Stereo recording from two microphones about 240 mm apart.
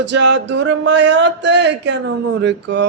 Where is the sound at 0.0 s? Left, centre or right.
Right.